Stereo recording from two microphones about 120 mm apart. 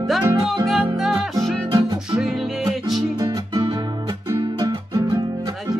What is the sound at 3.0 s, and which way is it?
Music, 30° right (ahead or behind).